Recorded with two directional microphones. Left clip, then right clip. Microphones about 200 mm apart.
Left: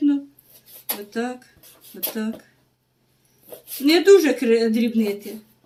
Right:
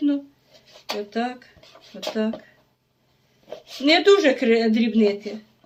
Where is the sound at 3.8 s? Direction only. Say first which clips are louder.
Left 2 dB; 50° right (ahead or behind).